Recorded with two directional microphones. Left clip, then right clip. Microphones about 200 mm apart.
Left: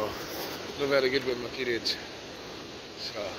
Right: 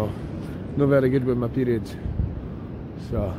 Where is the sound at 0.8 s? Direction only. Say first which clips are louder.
Right 5 dB; 30° right (ahead or behind).